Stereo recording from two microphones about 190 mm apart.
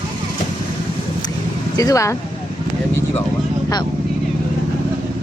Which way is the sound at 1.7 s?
15° left (ahead or behind).